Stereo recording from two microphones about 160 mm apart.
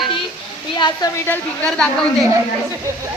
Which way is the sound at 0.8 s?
25° left (ahead or behind).